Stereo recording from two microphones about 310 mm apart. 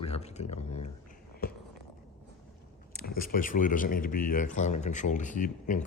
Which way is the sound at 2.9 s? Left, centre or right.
Left.